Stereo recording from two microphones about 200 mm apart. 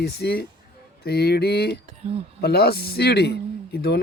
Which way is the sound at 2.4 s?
50° left (ahead or behind).